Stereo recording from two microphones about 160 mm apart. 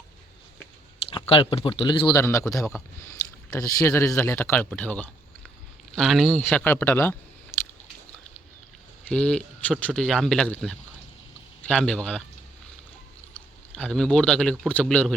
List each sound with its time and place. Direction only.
1.3 s speech: 30° left (ahead or behind); by 7.2 s 15° left (ahead or behind)
7.5 s biting: 15° left (ahead or behind)
9.0 s speech: 5° left (ahead or behind)
13.7 s speech: 5° left (ahead or behind)